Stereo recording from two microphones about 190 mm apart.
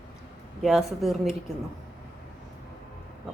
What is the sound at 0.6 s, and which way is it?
Speech, centre (ahead or behind).